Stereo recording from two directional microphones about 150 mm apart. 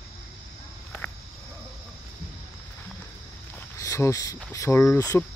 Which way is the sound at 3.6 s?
20° left (ahead or behind).